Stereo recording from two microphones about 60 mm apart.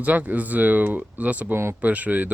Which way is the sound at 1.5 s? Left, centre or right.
Right.